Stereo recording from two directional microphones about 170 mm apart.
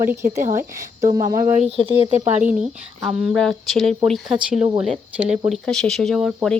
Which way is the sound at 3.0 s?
Centre (ahead or behind).